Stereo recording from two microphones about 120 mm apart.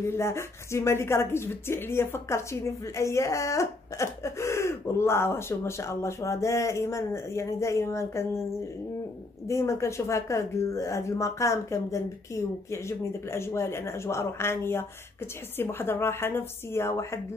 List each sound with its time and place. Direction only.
0.1 s speech: 20° left (ahead or behind)
9.5 s speech: 25° left (ahead or behind)